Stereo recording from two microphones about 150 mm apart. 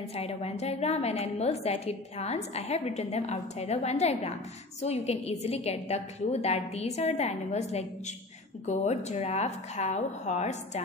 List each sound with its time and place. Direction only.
0.1 s a woman's voice: 45° left (ahead or behind)